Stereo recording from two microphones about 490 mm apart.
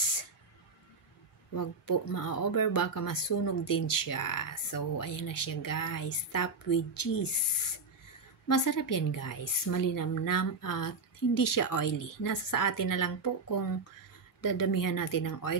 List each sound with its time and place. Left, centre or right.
1.5 s speech: left